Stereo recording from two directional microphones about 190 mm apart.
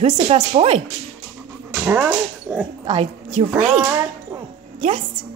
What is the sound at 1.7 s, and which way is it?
Speech, 10° right (ahead or behind).